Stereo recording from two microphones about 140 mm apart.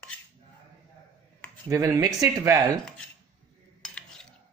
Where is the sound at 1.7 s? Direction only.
20° right (ahead or behind).